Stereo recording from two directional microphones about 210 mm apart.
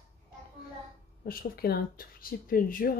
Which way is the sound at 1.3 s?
45° left (ahead or behind).